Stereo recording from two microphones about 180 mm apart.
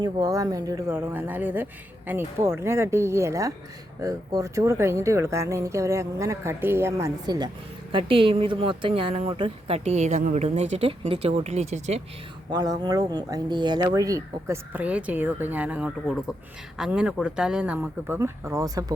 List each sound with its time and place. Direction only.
0.0 s a woman's voice: 20° right (ahead or behind); by 12.0 s 35° right (ahead or behind)
12.5 s speech: 20° right (ahead or behind)